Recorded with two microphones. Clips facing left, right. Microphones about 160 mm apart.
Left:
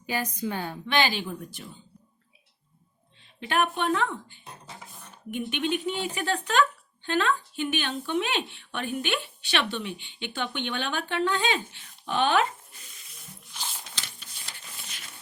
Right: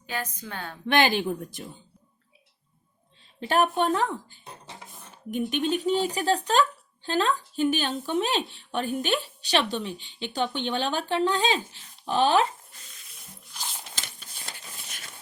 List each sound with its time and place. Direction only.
0.1 s a woman's voice: 10° left (ahead or behind)
0.9 s speech: 50° right (ahead or behind)
3.4 s speech: 40° right (ahead or behind)
13.9 s a sound: 45° right (ahead or behind)